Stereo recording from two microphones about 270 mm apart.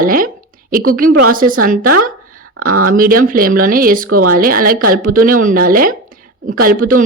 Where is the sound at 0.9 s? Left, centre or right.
Right.